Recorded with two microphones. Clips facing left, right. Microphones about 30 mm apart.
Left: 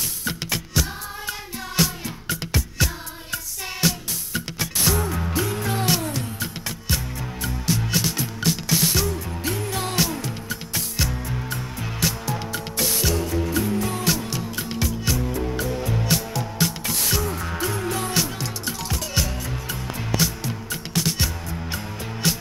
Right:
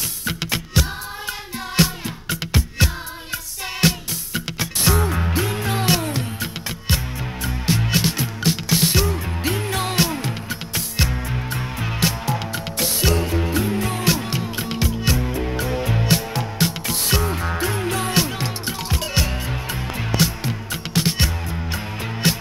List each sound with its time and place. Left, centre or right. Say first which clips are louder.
0.3 s music: right 4 dB; right